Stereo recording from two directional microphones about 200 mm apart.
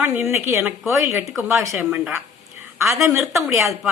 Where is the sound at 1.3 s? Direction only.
Centre (ahead or behind).